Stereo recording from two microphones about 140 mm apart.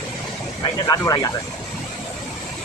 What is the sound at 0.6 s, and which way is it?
Speech, 30° left (ahead or behind).